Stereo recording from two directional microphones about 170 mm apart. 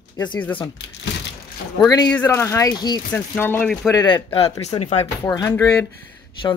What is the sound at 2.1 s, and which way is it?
Speech, 10° left (ahead or behind).